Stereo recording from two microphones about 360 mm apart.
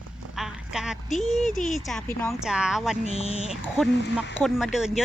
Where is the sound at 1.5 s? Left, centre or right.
Left.